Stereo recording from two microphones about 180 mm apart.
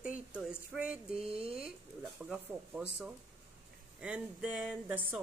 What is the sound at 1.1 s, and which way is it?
Speech, 30° right (ahead or behind).